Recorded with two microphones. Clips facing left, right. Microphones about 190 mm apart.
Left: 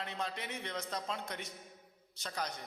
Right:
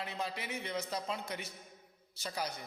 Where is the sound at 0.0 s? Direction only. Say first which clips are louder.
Right 1 dB; 5° right (ahead or behind).